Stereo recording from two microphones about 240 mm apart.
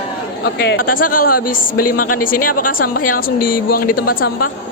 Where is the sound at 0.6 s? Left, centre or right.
Left.